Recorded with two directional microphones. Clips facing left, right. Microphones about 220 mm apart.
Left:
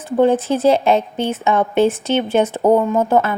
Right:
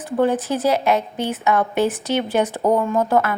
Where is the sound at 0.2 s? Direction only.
25° left (ahead or behind).